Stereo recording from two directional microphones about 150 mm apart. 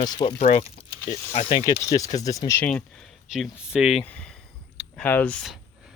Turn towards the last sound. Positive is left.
turn(degrees=5)  # may be behind; listen again after turning